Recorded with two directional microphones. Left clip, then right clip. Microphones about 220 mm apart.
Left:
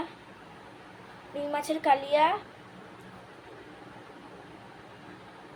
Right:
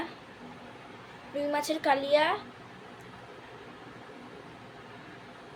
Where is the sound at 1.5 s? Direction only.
15° right (ahead or behind).